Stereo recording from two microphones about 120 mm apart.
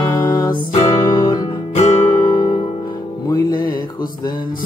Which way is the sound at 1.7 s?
65° left (ahead or behind).